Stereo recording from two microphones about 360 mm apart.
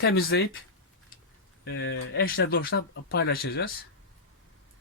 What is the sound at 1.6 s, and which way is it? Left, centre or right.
Speech, left.